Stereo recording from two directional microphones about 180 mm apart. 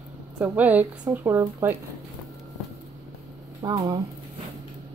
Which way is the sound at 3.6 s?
20° right (ahead or behind).